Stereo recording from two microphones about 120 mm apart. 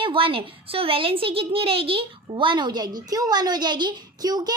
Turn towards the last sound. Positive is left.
turn(degrees=-35)  # may be behind; listen again after turning